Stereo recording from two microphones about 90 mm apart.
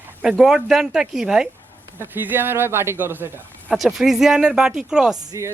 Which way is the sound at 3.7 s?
5° right (ahead or behind).